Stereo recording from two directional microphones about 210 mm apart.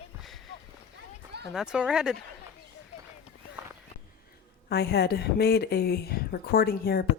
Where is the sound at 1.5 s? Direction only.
5° right (ahead or behind).